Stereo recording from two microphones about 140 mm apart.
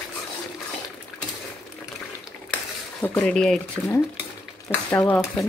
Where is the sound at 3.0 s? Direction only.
15° left (ahead or behind).